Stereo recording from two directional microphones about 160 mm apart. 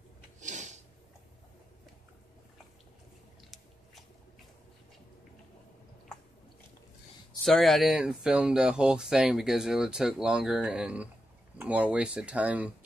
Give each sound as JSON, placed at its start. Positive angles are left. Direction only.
{"t": 0.4, "sound": "snort", "side_deg": -50}
{"t": 3.4, "sound": "biting", "side_deg": 0}
{"t": 7.4, "sound": "speech", "side_deg": 0}